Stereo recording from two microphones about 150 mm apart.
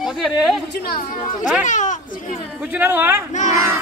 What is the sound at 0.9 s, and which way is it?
Speech, 70° left (ahead or behind).